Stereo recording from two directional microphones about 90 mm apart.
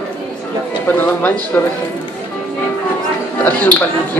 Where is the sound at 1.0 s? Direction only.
20° left (ahead or behind).